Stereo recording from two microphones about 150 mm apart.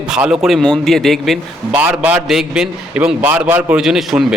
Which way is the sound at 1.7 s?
10° right (ahead or behind).